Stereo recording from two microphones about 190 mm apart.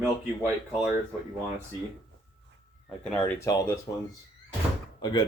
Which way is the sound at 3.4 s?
20° left (ahead or behind).